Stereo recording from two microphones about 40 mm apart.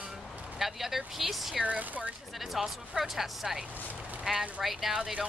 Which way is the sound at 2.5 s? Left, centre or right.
Centre.